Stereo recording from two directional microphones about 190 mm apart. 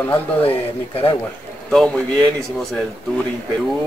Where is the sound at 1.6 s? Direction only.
5° left (ahead or behind).